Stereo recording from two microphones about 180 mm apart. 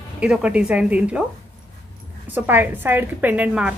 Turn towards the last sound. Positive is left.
turn(degrees=-10)  # may be behind; listen again after turning